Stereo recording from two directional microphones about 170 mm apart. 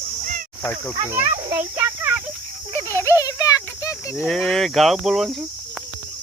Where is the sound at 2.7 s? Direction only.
15° left (ahead or behind).